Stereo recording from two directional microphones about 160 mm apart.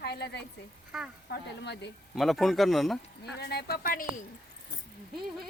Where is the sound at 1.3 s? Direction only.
90° left.